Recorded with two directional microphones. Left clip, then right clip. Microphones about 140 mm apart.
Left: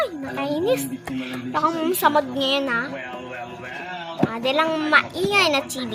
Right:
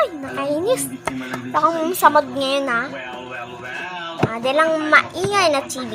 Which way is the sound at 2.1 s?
35° left (ahead or behind).